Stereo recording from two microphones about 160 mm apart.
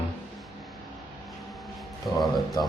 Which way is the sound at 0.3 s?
Centre (ahead or behind).